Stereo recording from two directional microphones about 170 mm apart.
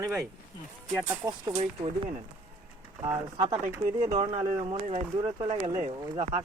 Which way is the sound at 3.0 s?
20° right (ahead or behind).